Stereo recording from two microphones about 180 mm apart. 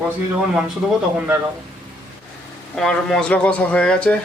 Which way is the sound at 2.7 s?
5° left (ahead or behind).